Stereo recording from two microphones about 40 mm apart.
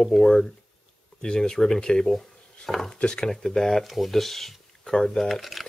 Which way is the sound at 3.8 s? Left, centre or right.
Centre.